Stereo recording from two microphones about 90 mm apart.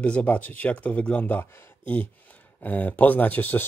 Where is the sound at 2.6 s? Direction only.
20° left (ahead or behind).